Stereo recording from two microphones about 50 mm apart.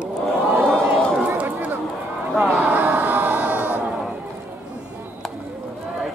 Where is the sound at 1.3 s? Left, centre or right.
Right.